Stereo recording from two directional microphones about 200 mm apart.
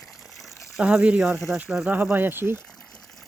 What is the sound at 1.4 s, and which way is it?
Speech, 5° right (ahead or behind).